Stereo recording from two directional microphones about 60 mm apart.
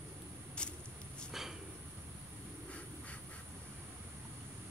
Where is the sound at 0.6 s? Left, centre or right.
Centre.